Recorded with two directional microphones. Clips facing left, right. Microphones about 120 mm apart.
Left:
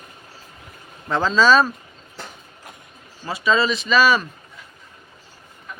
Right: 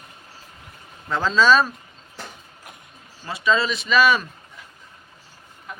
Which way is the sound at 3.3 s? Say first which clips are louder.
Left 2 dB; 5° left (ahead or behind).